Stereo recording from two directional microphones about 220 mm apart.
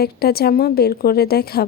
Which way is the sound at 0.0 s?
45° left (ahead or behind).